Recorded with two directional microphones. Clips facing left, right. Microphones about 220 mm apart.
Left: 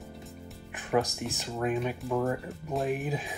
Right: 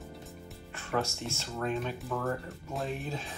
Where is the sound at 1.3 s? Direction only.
15° left (ahead or behind).